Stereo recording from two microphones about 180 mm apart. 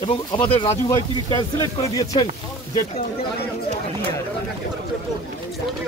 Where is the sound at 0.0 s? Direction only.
25° left (ahead or behind).